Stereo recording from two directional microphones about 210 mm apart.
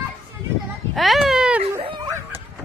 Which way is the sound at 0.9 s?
Centre (ahead or behind).